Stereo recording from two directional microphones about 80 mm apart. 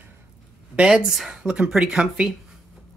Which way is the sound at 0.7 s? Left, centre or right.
Centre.